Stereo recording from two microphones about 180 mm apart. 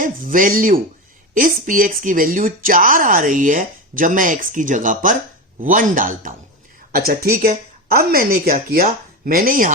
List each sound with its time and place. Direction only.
0.0 s speech: 50° right (ahead or behind)